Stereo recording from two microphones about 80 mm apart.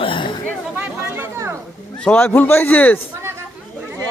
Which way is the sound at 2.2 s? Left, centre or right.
Left.